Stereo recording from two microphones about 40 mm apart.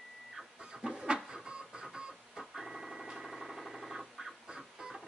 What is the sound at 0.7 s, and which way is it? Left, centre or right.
Vehicle, centre.